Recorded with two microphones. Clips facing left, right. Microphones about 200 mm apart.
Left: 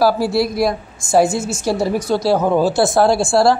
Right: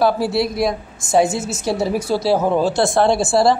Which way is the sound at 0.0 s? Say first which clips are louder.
Left 2 dB; centre (ahead or behind).